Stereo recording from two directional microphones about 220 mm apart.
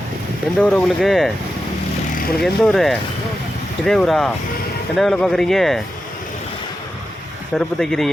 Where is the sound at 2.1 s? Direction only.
40° left (ahead or behind).